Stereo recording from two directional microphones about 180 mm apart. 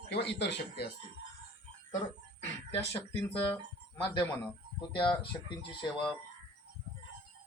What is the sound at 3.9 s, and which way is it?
Speech, 20° left (ahead or behind).